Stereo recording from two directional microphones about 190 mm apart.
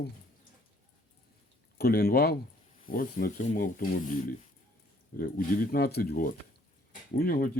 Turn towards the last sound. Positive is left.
turn(degrees=50)  # may be behind; listen again after turning